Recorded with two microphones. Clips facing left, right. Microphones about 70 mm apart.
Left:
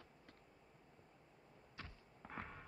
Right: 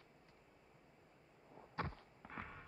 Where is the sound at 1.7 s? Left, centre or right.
Right.